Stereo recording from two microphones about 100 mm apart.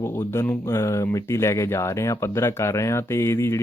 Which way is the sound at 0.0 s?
25° left (ahead or behind).